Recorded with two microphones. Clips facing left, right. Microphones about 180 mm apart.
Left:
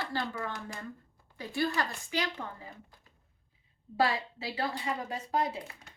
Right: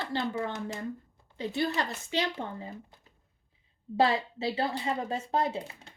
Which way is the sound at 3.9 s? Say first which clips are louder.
Right 4 dB; 25° right (ahead or behind).